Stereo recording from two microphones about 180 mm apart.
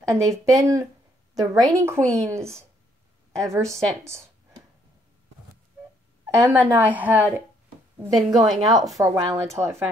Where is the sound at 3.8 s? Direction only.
15° right (ahead or behind).